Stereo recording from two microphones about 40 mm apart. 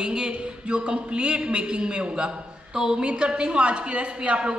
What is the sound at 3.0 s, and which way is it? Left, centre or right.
A woman's voice, right.